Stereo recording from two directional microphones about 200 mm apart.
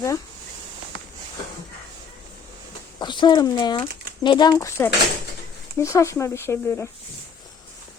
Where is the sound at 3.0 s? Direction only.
20° left (ahead or behind).